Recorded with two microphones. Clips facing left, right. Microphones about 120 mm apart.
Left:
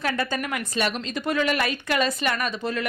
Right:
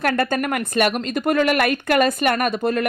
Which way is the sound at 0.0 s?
55° right (ahead or behind).